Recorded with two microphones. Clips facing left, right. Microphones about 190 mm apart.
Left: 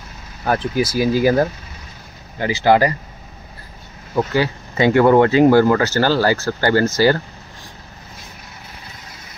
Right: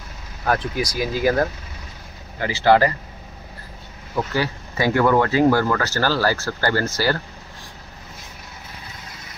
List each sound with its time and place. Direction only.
0.5 s speech: 5° left (ahead or behind)
2.4 s speech: 15° left (ahead or behind)
4.1 s speech: 25° left (ahead or behind)